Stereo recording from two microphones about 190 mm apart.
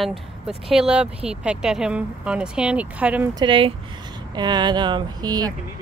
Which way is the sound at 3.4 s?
25° right (ahead or behind).